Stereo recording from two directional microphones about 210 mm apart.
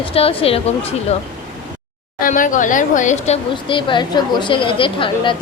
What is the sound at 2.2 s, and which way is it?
Speech, 40° left (ahead or behind).